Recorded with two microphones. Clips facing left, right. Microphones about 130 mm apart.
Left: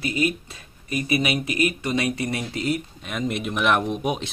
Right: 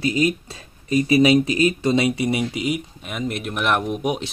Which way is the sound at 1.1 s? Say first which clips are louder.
Right 8 dB; 30° right (ahead or behind).